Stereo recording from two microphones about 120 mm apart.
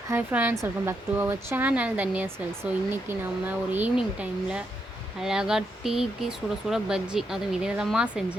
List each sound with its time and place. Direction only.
0.1 s speech: 15° right (ahead or behind)